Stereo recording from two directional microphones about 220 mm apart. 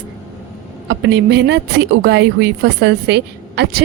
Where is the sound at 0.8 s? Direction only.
55° right (ahead or behind).